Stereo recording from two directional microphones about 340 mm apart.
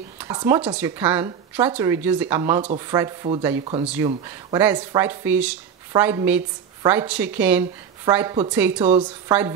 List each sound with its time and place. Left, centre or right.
0.2 s speech: centre